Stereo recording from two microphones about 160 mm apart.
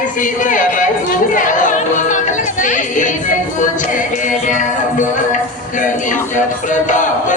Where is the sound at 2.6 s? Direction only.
50° left (ahead or behind).